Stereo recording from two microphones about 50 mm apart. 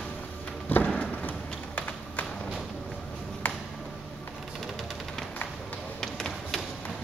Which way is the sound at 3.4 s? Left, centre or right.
Left.